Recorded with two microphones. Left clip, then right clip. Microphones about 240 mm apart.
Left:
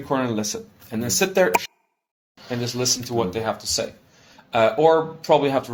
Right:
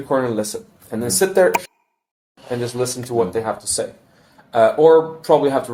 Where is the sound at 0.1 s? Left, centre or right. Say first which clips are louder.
Right 4 dB; left.